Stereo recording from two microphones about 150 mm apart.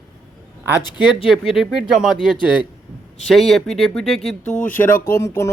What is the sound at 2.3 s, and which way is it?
Speech, 30° left (ahead or behind).